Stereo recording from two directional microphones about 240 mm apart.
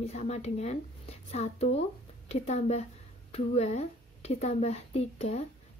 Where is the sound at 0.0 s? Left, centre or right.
Left.